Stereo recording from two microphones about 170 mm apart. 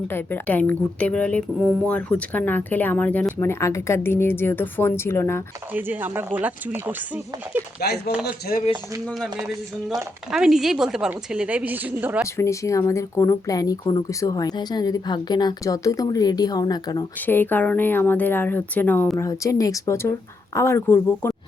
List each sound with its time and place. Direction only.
0.1 s a woman's voice: 10° left (ahead or behind)
5.7 s speech: 10° right (ahead or behind)
7.8 s speech: 65° left (ahead or behind)
9.0 s a woman's voice: 5° left (ahead or behind)
12.4 s speech: 15° left (ahead or behind)
17.2 s a woman's voice: 10° left (ahead or behind)